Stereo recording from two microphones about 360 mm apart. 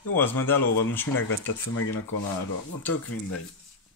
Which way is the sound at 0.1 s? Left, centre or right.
Centre.